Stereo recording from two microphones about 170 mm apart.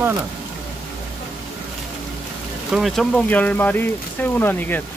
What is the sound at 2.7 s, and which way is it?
Speech, centre (ahead or behind).